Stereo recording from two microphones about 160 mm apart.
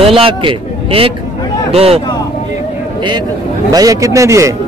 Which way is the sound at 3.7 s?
20° right (ahead or behind).